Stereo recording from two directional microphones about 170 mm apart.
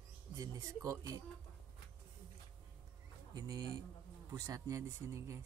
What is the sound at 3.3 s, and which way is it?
Speech, 25° right (ahead or behind).